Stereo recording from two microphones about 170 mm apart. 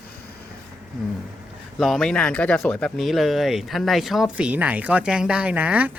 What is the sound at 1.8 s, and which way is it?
Speech, centre (ahead or behind).